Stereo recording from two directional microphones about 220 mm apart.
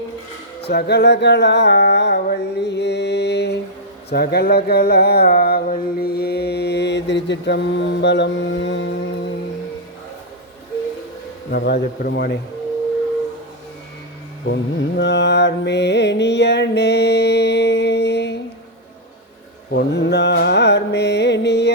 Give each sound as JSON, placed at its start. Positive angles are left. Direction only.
{"t": 0.7, "sound": "mantra", "side_deg": 45}
{"t": 11.5, "sound": "mantra", "side_deg": 45}
{"t": 14.4, "sound": "mantra", "side_deg": 55}
{"t": 19.7, "sound": "mantra", "side_deg": 50}